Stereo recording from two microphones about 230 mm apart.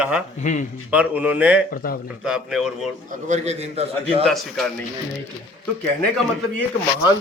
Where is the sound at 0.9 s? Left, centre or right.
Centre.